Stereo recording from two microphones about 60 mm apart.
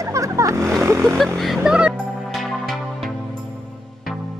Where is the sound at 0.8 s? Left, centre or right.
Right.